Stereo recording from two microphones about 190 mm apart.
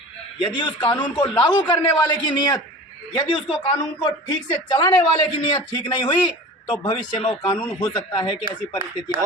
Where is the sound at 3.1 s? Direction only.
25° left (ahead or behind).